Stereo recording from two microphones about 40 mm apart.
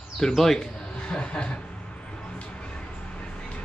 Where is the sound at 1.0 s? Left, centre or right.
Left.